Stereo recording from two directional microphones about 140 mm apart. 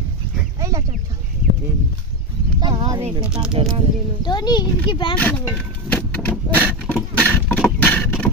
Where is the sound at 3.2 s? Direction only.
5° right (ahead or behind).